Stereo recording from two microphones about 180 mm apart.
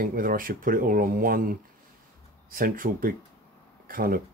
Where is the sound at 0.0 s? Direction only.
55° right (ahead or behind).